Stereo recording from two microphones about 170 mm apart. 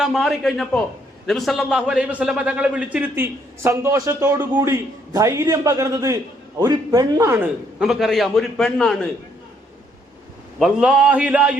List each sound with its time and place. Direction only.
0.0 s a man's voice: centre (ahead or behind); by 7.4 s 15° right (ahead or behind)
7.8 s a man's voice: centre (ahead or behind)
10.6 s a man's voice: 5° right (ahead or behind)